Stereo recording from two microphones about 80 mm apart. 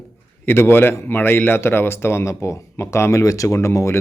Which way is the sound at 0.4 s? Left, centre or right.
Left.